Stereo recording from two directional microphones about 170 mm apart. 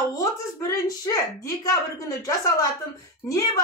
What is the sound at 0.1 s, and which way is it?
Speech, 20° left (ahead or behind).